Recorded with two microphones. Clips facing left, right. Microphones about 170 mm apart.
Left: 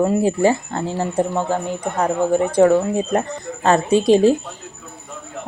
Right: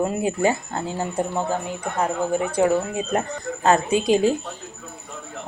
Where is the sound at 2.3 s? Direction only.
35° left (ahead or behind).